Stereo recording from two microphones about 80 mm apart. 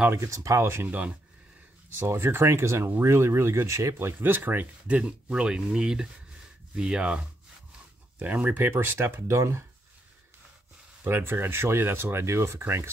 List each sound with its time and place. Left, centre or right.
0.1 s speech: right
0.8 s speech: centre
2.0 s speech: right
11.1 s speech: right